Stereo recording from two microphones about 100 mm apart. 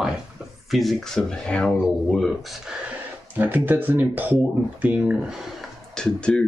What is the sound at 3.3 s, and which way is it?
Speech, 20° right (ahead or behind).